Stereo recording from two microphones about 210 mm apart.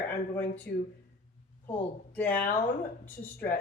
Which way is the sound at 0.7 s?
50° left (ahead or behind).